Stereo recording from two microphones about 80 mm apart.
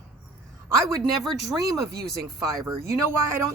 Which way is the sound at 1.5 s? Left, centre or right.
Right.